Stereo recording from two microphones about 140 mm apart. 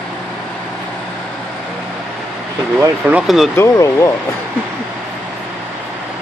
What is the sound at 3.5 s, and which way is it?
Speech, 20° left (ahead or behind).